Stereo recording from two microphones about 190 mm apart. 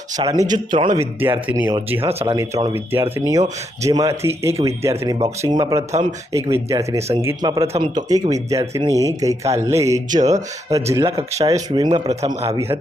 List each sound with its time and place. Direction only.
0.2 s speech: 20° right (ahead or behind)
1.5 s speech: 10° right (ahead or behind)
2.0 s speech: 30° right (ahead or behind)
2.3 s speech: 15° right (ahead or behind)
5.9 s speech: 35° right (ahead or behind)
6.3 s speech: 15° right (ahead or behind); by 12.5 s 35° right (ahead or behind)